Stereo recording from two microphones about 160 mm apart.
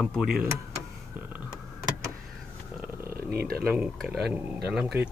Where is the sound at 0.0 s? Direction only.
Centre (ahead or behind).